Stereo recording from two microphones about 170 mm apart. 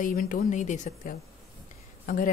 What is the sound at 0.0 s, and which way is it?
A woman's voice, 55° left (ahead or behind).